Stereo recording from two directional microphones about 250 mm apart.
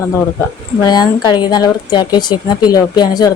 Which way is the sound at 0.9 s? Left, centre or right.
Centre.